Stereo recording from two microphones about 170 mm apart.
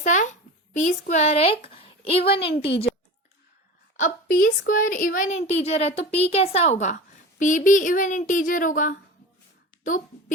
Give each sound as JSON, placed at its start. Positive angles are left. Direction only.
{"t": 0.0, "sound": "a child's voice", "side_deg": 45}
{"t": 2.2, "sound": "a woman's voice", "side_deg": 70}
{"t": 2.6, "sound": "speech", "side_deg": 35}
{"t": 3.9, "sound": "a woman's voice", "side_deg": 50}